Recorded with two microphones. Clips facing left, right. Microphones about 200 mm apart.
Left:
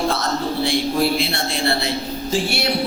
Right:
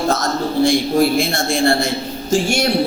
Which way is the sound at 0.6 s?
45° right (ahead or behind).